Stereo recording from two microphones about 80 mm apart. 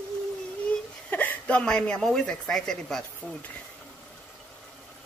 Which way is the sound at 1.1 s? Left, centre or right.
Left.